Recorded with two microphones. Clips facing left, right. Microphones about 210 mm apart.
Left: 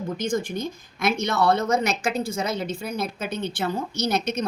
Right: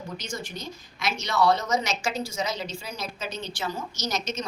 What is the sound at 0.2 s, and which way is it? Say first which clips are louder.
A woman's voice: left 10 dB; 50° left (ahead or behind).